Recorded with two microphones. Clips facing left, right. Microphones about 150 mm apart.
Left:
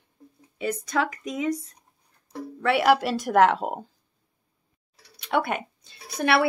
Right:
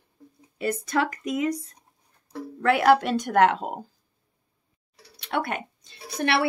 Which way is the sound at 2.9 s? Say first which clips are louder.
Right 2 dB; 5° left (ahead or behind).